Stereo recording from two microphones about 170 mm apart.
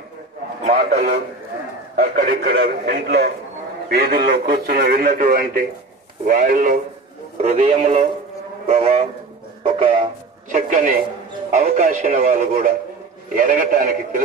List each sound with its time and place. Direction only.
0.7 s a man's voice: 40° right (ahead or behind)
2.2 s a man's voice: 60° right (ahead or behind)
7.4 s speech: 35° right (ahead or behind)
10.5 s a man's voice: 55° right (ahead or behind)